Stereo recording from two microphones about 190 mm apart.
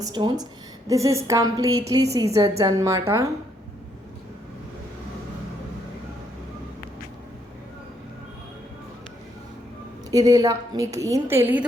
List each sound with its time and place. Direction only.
0.0 s a woman's voice: 25° right (ahead or behind)
10.1 s a woman's voice: 20° right (ahead or behind)